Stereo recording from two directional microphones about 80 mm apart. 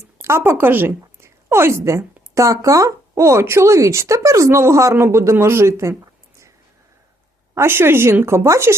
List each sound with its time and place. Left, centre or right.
0.2 s a woman's voice: right
7.5 s a woman's voice: right